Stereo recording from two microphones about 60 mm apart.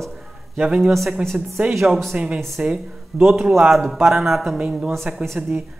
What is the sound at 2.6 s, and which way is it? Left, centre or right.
Speech, centre.